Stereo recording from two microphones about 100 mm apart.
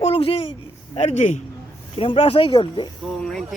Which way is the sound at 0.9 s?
90° left.